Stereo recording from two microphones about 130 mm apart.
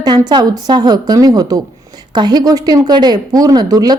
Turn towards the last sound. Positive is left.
turn(degrees=-30)  # may be behind; listen again after turning